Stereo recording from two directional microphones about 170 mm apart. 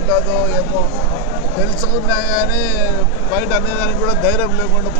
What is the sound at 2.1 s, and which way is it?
Speech, 10° left (ahead or behind).